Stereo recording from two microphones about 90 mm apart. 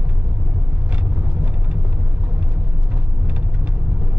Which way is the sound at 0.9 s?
15° right (ahead or behind).